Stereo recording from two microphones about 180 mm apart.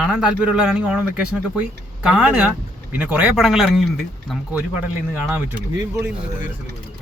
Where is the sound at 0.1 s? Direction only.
5° right (ahead or behind).